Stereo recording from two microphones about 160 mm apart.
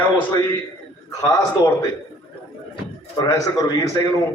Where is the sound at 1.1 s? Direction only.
20° left (ahead or behind).